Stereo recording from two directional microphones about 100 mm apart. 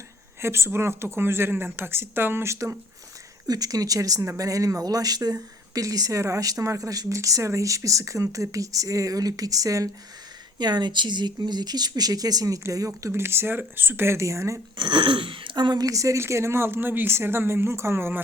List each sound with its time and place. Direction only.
0.4 s speech: 25° right (ahead or behind)
3.4 s speech: 40° right (ahead or behind)
10.6 s speech: 45° right (ahead or behind); by 14.6 s 30° right (ahead or behind)
14.8 s speech: 50° right (ahead or behind); by 18.2 s 25° right (ahead or behind)